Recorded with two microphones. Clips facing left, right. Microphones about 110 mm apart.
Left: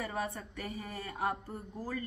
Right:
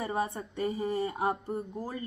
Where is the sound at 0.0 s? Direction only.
25° right (ahead or behind).